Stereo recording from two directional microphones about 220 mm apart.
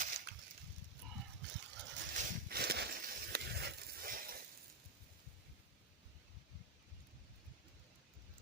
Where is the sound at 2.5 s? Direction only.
45° right (ahead or behind).